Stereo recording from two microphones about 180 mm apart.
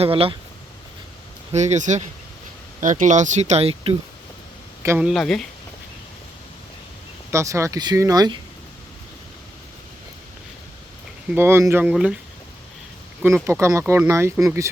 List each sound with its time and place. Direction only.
0.0 s speech: 30° right (ahead or behind)
1.5 s speech: 40° right (ahead or behind)
4.8 s speech: 15° right (ahead or behind)
5.0 s speech: centre (ahead or behind)
7.3 s speech: 15° right (ahead or behind)
11.3 s speech: 15° right (ahead or behind)
13.4 s speech: 15° right (ahead or behind)